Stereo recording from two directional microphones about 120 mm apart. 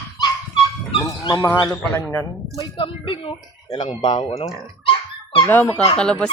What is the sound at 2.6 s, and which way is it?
Speech, 45° left (ahead or behind).